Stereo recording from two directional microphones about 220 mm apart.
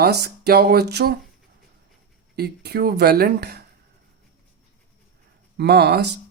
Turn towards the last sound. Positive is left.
turn(degrees=-45)  # may be behind; listen again after turning